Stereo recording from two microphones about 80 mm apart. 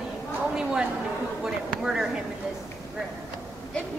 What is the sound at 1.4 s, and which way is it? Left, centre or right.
Speech, centre.